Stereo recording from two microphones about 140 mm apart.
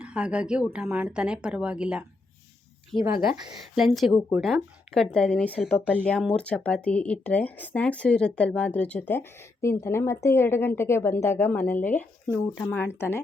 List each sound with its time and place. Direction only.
0.0 s speech: 10° right (ahead or behind); by 13.2 s 15° left (ahead or behind)